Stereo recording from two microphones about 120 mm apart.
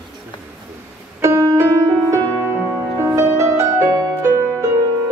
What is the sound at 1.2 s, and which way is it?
Music, 25° right (ahead or behind).